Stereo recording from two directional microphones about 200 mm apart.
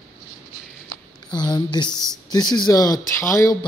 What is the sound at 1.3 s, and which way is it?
Speech, 20° left (ahead or behind).